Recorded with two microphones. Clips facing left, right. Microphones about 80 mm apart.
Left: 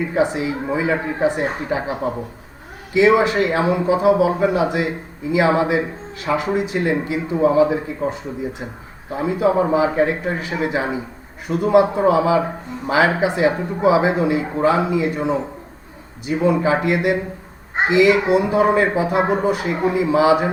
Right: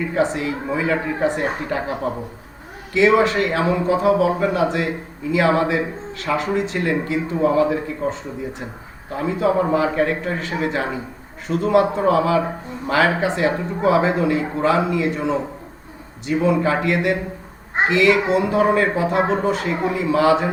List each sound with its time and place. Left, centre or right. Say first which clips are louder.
0.1 s a man's voice: even; centre